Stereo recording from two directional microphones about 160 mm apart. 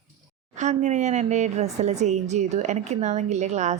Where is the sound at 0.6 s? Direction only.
50° right (ahead or behind).